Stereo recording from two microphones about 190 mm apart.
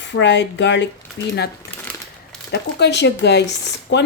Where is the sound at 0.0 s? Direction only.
70° left (ahead or behind).